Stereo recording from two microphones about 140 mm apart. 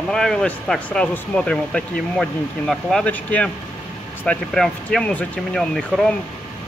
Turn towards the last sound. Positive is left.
turn(degrees=0)  # may be behind; listen again after turning